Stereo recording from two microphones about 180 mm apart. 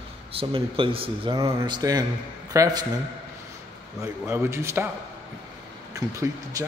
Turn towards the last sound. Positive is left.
turn(degrees=-15)  # may be behind; listen again after turning